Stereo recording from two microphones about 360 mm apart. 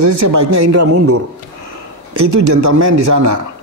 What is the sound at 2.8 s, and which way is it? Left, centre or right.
Speech, right.